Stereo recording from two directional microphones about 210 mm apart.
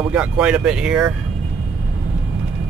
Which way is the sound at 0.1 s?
5° right (ahead or behind).